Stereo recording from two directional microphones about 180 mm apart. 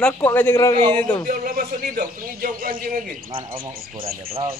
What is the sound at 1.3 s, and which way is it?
A man's voice, 50° right (ahead or behind).